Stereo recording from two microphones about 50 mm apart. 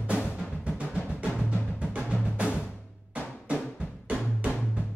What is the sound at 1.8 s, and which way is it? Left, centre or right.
Music, right.